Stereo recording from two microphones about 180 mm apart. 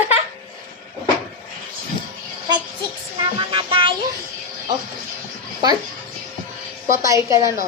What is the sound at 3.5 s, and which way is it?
Music, 30° right (ahead or behind).